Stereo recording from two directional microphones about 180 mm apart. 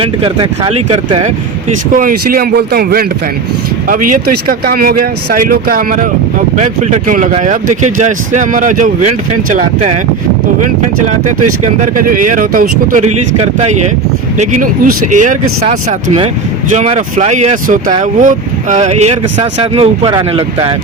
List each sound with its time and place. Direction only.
0.0 s speech: 30° right (ahead or behind)
1.9 s speech: 50° right (ahead or behind)
11.3 s speech: 45° right (ahead or behind)
13.3 s speech: 35° right (ahead or behind)